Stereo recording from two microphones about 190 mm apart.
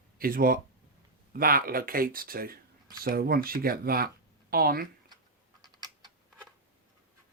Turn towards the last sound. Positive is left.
turn(degrees=-20)  # may be behind; listen again after turning